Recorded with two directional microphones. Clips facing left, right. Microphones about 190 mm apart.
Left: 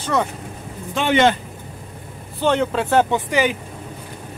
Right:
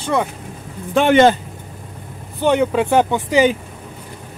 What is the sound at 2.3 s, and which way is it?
Speech, 15° right (ahead or behind).